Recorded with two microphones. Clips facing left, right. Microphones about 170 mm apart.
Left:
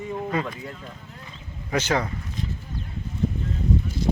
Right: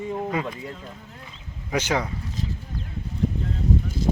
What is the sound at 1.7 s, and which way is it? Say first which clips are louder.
Speech: left 1 dB; 10° right (ahead or behind).